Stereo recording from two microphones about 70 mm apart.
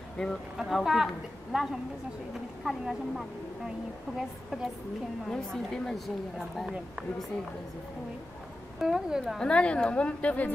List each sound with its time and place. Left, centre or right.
0.2 s a woman's voice: centre
0.6 s a woman's voice: centre
5.3 s a woman's voice: centre
8.7 s a woman's voice: centre
9.4 s a woman's voice: centre